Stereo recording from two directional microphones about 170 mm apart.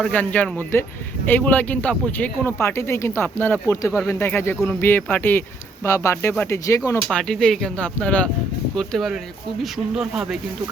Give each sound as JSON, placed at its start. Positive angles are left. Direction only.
{"t": 0.0, "sound": "speech", "side_deg": 10}
{"t": 7.1, "sound": "speech", "side_deg": 5}